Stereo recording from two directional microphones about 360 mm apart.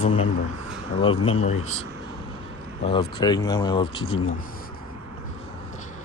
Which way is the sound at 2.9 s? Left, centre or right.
Centre.